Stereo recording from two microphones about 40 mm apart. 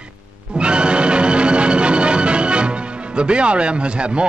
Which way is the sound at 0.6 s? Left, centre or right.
Right.